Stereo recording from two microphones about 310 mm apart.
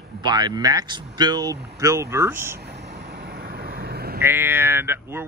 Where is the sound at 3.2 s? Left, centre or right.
Right.